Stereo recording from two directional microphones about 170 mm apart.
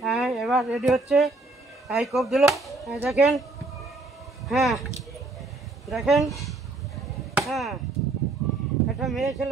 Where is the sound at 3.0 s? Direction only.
5° right (ahead or behind).